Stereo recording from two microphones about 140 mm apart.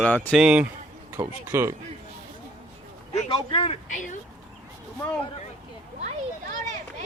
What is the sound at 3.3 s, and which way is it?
Speech, 40° left (ahead or behind).